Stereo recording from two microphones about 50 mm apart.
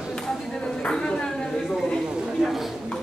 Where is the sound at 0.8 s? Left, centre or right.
Centre.